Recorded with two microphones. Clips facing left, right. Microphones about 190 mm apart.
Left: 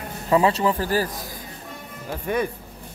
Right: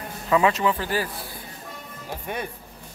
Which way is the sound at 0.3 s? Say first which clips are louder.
Left 2 dB; 35° left (ahead or behind).